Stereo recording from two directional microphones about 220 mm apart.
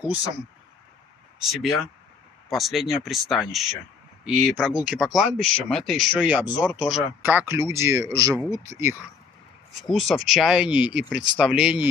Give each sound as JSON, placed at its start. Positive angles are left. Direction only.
{"t": 1.4, "sound": "speech", "side_deg": 0}
{"t": 9.8, "sound": "speech", "side_deg": 0}